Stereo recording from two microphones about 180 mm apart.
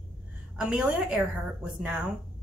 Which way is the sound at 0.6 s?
5° right (ahead or behind).